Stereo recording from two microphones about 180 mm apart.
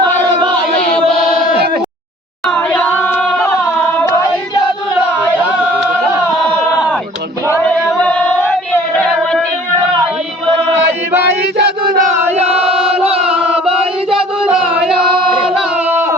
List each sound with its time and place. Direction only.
2.5 s a capella: 5° left (ahead or behind)
7.9 s female singing: 5° left (ahead or behind)
11.1 s chant: 70° right (ahead or behind); by 12.1 s 50° right (ahead or behind)
12.5 s choir: 5° right (ahead or behind)
13.2 s chant: 5° right (ahead or behind)
14.5 s singing: 5° right (ahead or behind)